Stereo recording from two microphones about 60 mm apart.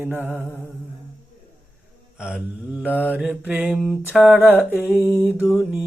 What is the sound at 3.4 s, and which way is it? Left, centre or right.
Speech, right.